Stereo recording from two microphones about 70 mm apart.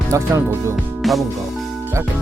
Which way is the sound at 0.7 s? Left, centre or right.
Centre.